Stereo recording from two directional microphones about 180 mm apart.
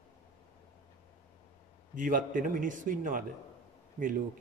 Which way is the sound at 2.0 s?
50° right (ahead or behind).